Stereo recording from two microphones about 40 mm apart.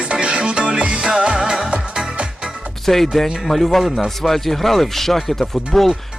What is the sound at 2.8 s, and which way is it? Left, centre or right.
Speech, centre.